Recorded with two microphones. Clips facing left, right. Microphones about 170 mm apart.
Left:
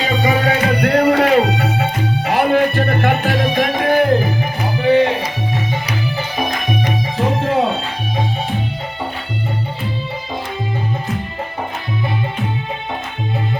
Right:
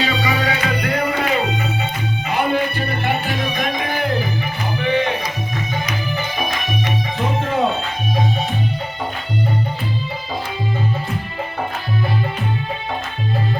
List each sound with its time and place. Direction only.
0.1 s music: 50° left (ahead or behind)
4.8 s music: 35° left (ahead or behind)